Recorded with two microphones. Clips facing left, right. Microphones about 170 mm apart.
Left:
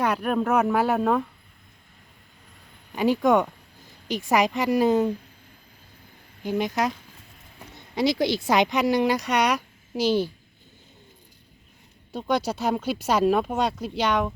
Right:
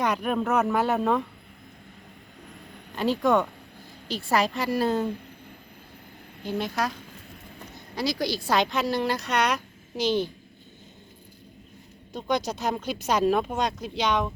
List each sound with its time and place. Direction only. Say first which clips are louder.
0.0 s a man's voice: left 2 dB; 5° left (ahead or behind)
2.9 s speech: left 3 dB; 10° left (ahead or behind)
6.4 s speech: left 3 dB; 15° left (ahead or behind)
7.9 s speech: left 5 dB; 25° left (ahead or behind)
12.1 s speech: left 2 dB; 10° left (ahead or behind)